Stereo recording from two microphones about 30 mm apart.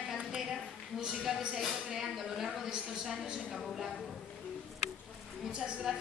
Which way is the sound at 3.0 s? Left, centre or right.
Centre.